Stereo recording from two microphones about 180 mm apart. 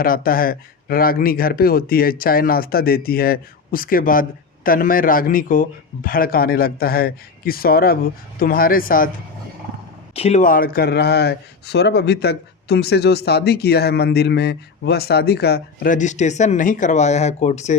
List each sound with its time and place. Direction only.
0.0 s speech: 55° left (ahead or behind)
10.2 s speech: 35° left (ahead or behind)